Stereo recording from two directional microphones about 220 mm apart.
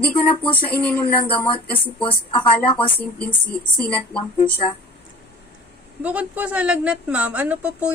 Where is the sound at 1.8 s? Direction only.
25° left (ahead or behind).